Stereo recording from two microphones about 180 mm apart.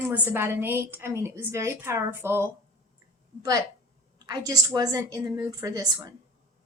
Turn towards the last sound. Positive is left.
turn(degrees=-20)  # may be behind; listen again after turning